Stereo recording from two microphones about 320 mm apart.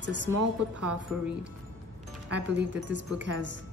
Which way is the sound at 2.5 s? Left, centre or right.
Right.